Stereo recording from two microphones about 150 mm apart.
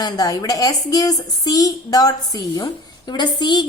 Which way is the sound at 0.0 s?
25° left (ahead or behind).